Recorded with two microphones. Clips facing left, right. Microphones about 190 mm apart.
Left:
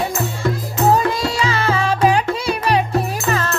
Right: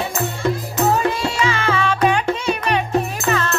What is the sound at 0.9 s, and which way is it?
Music, 35° left (ahead or behind).